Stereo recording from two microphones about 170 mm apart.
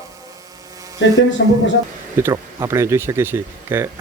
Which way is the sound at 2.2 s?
15° right (ahead or behind).